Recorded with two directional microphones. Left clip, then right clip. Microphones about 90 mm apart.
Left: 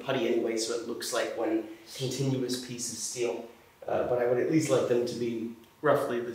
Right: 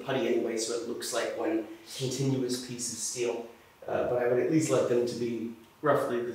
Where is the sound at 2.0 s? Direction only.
25° left (ahead or behind).